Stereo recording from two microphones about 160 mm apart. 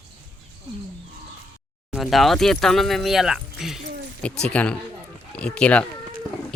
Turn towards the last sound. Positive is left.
turn(degrees=10)  # may be behind; listen again after turning